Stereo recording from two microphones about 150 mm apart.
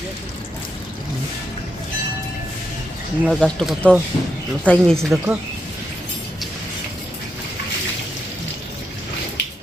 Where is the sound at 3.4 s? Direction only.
5° left (ahead or behind).